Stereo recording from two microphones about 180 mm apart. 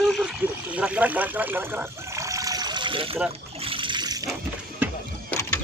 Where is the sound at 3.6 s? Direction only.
30° right (ahead or behind).